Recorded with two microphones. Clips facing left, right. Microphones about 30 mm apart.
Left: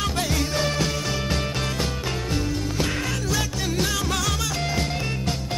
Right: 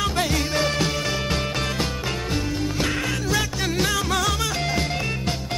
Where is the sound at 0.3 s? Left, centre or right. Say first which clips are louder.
Right 2 dB; centre.